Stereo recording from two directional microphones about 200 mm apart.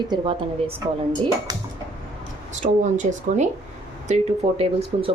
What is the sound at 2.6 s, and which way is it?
Speech, 35° right (ahead or behind).